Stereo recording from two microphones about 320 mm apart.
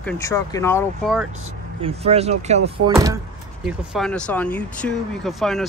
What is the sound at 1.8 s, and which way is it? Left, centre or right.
Speech, centre.